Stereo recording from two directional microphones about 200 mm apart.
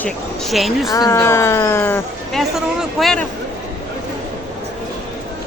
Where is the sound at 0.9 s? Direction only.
15° left (ahead or behind).